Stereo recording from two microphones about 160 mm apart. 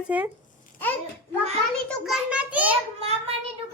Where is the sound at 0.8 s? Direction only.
10° left (ahead or behind).